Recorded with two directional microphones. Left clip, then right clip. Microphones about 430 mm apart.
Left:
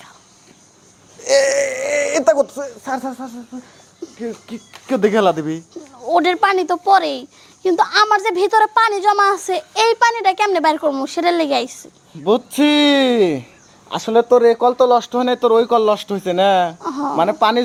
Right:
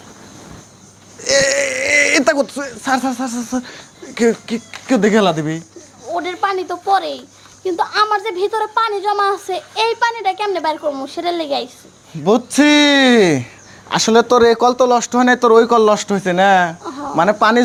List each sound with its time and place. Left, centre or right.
1.2 s a sound: centre
4.4 s speech: centre
6.1 s speech: left
12.2 s speech: centre
16.8 s a sound: left
17.2 s speech: centre